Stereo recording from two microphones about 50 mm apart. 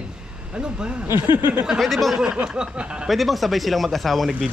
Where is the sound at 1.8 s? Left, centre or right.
Centre.